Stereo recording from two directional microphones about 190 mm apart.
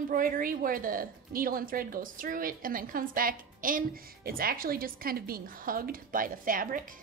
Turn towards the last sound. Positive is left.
turn(degrees=-45)  # may be behind; listen again after turning